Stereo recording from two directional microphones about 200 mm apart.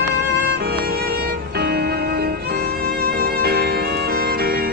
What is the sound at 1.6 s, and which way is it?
Music, 50° right (ahead or behind).